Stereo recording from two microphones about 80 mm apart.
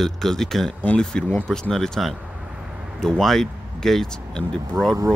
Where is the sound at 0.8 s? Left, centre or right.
Centre.